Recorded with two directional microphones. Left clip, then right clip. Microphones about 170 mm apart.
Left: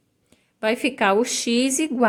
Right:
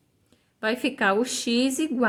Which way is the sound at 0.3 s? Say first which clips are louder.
Left 4 dB; 15° left (ahead or behind).